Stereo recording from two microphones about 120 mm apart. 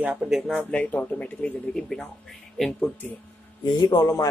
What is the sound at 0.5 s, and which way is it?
Speech, 10° left (ahead or behind).